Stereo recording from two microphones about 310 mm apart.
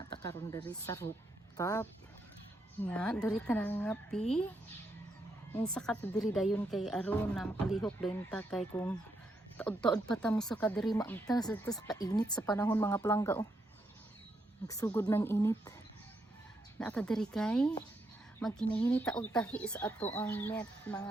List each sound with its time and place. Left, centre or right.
0.2 s a woman's voice: centre
5.5 s a woman's voice: centre
14.7 s speech: centre
16.7 s a woman's voice: centre